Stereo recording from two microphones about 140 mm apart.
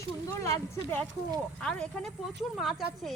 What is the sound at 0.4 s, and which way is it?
A woman's voice, 15° left (ahead or behind).